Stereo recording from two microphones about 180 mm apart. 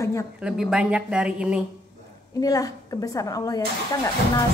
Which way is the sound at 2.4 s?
20° left (ahead or behind).